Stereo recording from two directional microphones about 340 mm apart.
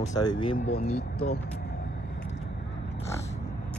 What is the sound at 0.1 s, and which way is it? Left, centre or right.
Speech, centre.